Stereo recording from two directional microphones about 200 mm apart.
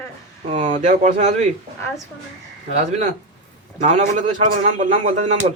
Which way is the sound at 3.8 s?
35° right (ahead or behind).